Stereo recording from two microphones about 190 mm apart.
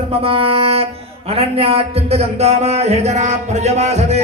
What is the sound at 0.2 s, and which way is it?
Music, 30° right (ahead or behind).